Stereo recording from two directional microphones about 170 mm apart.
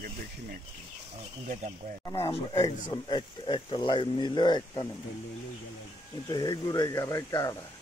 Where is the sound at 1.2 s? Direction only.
45° right (ahead or behind).